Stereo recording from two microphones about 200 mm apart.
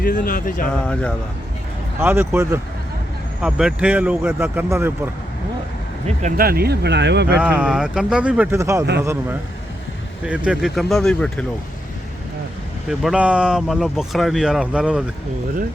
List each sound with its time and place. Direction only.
0.0 s speech: 45° left (ahead or behind)
2.0 s speech: 10° right (ahead or behind)
6.1 s speech: 40° right (ahead or behind); by 7.3 s 60° right (ahead or behind)
7.3 s speech: 5° right (ahead or behind)
12.9 s speech: centre (ahead or behind)